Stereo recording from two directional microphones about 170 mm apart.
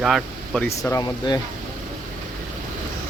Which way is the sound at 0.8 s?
20° left (ahead or behind).